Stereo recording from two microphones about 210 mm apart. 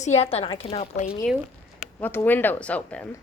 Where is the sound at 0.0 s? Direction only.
30° left (ahead or behind).